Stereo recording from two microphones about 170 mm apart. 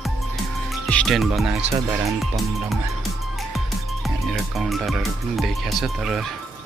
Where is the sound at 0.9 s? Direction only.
5° left (ahead or behind).